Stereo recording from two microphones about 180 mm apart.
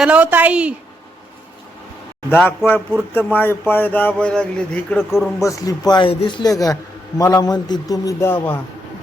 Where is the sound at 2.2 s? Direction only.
10° left (ahead or behind).